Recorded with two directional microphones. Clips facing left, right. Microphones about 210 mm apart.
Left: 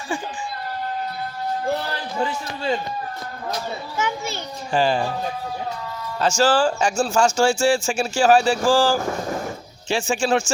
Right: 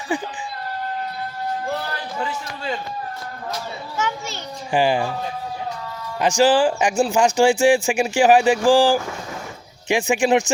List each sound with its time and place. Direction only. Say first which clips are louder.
0.1 s a sound: right 3 dB; 20° right (ahead or behind)
3.5 s children playing: left 2 dB; 15° left (ahead or behind)
4.7 s speech: right 1 dB; 15° right (ahead or behind)
6.1 s speech: right 2 dB; 15° right (ahead or behind)
9.0 s vehicle: left 6 dB; 45° left (ahead or behind)
9.9 s speech: right 3 dB; 15° right (ahead or behind)